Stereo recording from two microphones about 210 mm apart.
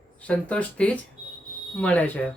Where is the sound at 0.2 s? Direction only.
5° left (ahead or behind).